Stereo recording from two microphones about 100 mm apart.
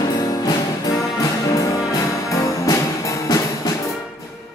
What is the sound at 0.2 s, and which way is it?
Music, 40° left (ahead or behind).